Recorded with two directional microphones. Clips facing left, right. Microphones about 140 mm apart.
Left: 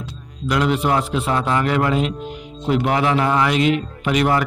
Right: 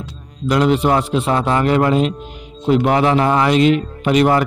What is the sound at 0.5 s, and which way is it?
A man's voice, 30° right (ahead or behind).